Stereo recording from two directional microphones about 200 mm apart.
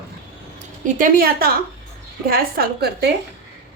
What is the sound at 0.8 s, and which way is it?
A woman's voice, 45° right (ahead or behind).